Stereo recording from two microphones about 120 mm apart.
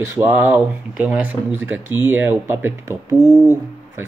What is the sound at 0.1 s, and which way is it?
Speech, 20° right (ahead or behind).